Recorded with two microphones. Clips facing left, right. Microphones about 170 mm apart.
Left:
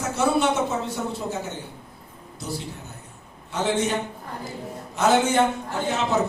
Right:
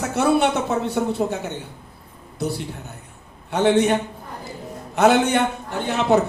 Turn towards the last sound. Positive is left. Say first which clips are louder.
# right 5 dB
turn(degrees=-65)  # may be behind; listen again after turning